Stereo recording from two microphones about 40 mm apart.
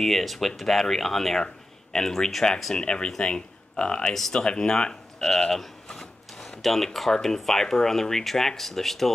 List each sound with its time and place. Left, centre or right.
0.0 s speech: centre